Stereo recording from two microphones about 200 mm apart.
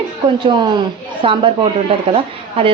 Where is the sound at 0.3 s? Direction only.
25° right (ahead or behind).